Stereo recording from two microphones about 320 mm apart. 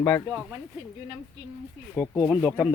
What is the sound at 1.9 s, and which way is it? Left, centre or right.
Speech, centre.